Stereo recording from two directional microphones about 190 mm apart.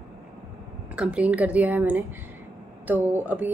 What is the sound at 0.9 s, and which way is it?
A woman's voice, 5° right (ahead or behind).